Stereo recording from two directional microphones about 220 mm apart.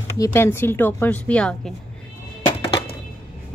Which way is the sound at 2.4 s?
25° left (ahead or behind).